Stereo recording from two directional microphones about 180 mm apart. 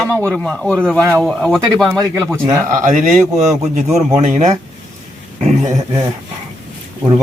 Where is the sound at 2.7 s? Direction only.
45° right (ahead or behind).